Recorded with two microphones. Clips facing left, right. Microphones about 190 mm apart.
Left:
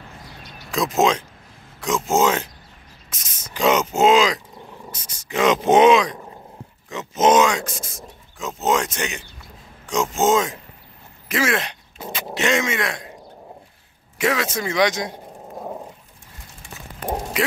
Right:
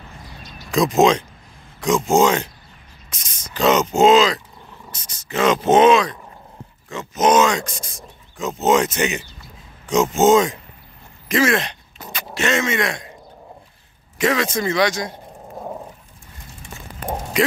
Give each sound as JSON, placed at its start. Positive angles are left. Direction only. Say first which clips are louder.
{"t": 0.7, "sound": "speech", "louder": "right 4 dB", "side_deg": 0}
{"t": 7.4, "sound": "speech", "louder": "right 1 dB", "side_deg": 5}
{"t": 12.0, "sound": "a sound", "louder": "even", "side_deg": 25}
{"t": 14.1, "sound": "speech", "louder": "right 2 dB", "side_deg": 10}